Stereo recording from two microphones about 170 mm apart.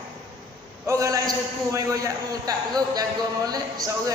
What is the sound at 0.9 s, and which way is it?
A man's voice, 20° right (ahead or behind).